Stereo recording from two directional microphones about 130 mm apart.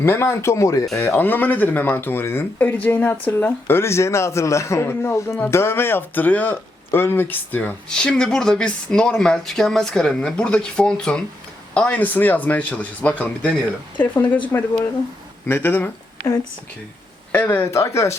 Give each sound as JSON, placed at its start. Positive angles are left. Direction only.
{"t": 0.0, "sound": "speech", "side_deg": 20}
{"t": 16.2, "sound": "speech", "side_deg": 25}
{"t": 17.3, "sound": "speech", "side_deg": 15}